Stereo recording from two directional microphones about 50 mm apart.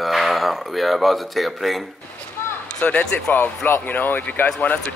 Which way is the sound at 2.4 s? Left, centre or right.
Left.